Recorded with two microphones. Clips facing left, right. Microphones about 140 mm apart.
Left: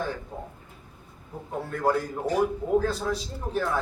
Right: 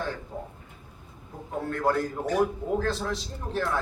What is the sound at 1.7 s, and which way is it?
A man's voice, 5° left (ahead or behind).